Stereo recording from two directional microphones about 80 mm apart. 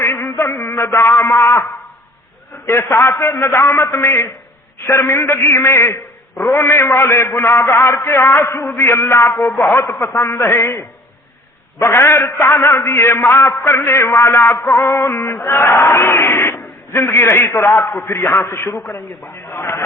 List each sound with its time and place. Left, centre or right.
0.0 s a man's voice: left
3.1 s a man's voice: left